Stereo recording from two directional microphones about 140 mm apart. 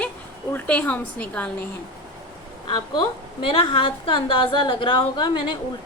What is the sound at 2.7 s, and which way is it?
A woman's voice, 35° left (ahead or behind).